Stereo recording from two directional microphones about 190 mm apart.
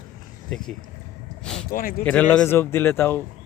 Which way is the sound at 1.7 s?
50° left (ahead or behind).